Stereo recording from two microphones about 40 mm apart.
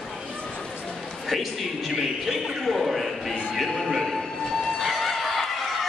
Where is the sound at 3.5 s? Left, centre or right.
Centre.